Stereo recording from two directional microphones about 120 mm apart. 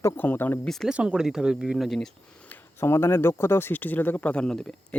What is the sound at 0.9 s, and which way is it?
Speech, 5° right (ahead or behind).